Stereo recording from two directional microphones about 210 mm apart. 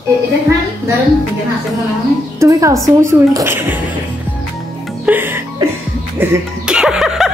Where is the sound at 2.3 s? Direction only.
15° right (ahead or behind).